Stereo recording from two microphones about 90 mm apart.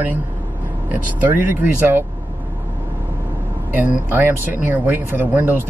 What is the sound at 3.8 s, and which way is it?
Speech, 20° right (ahead or behind).